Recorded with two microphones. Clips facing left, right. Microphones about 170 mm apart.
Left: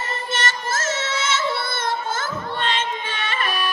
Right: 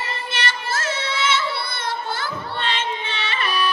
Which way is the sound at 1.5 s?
45° left (ahead or behind).